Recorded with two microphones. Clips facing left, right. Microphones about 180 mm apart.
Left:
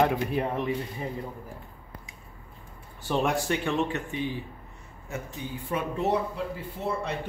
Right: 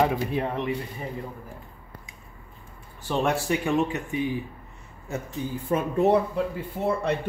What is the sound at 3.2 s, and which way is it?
Speech, 5° right (ahead or behind).